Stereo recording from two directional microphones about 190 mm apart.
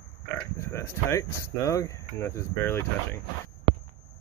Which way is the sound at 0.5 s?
15° left (ahead or behind).